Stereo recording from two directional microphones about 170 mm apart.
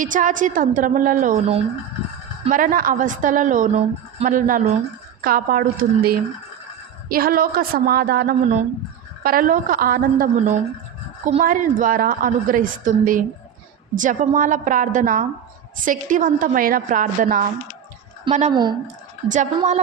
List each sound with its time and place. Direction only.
0.0 s a woman's voice: 50° right (ahead or behind)
2.5 s a woman's voice: 55° right (ahead or behind)
18.5 s speech: 25° right (ahead or behind)
19.3 s a woman's voice: 45° right (ahead or behind)